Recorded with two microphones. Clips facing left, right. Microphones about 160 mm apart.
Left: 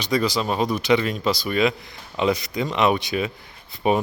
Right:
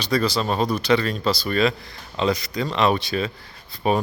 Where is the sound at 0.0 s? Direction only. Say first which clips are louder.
Even; 20° left (ahead or behind).